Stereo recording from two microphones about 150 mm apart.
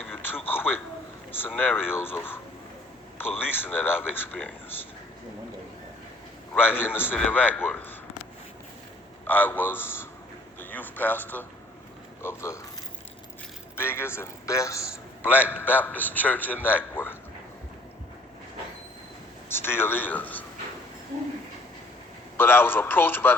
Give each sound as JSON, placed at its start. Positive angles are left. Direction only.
{"t": 0.3, "sound": "a sound", "side_deg": 15}
{"t": 1.3, "sound": "a man's voice", "side_deg": 10}
{"t": 6.5, "sound": "a man's voice", "side_deg": 15}
{"t": 9.2, "sound": "a man's voice", "side_deg": 10}
{"t": 13.7, "sound": "a man's voice", "side_deg": 15}
{"t": 15.2, "sound": "a man's voice", "side_deg": -10}
{"t": 15.4, "sound": "a man's voice", "side_deg": 15}
{"t": 19.5, "sound": "a man's voice", "side_deg": 15}
{"t": 22.4, "sound": "a man's voice", "side_deg": 15}